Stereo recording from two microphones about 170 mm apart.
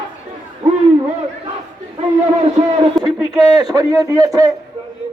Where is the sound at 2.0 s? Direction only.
40° right (ahead or behind).